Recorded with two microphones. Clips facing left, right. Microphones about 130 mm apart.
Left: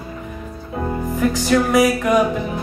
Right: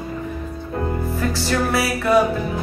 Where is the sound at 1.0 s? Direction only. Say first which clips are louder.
Left 4 dB; 15° left (ahead or behind).